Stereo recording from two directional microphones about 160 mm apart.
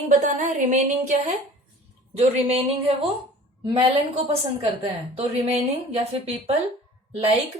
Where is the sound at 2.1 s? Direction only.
40° right (ahead or behind).